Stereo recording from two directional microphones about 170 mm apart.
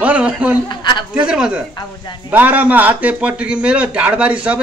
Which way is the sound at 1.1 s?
5° right (ahead or behind).